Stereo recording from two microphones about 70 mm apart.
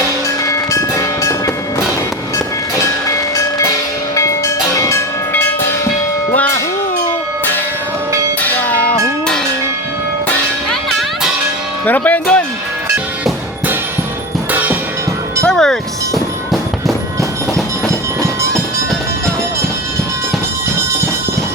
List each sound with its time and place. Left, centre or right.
0.4 s train: left
3.3 s tubular bells: left
4.1 s music: left
8.4 s music: left
10.7 s music: centre
11.9 s speech: left
14.5 s music: right
15.4 s music: centre